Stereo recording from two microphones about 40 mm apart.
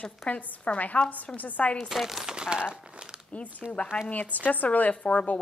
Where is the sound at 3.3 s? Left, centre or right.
Left.